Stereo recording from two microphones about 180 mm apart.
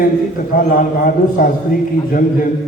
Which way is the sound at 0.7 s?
50° left (ahead or behind).